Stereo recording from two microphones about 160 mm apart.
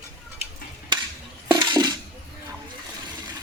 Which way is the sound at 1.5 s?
25° right (ahead or behind).